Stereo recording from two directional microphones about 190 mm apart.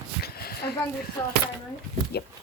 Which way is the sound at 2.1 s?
60° left (ahead or behind).